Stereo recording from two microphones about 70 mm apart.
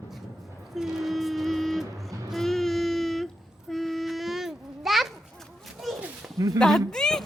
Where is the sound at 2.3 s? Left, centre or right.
Centre.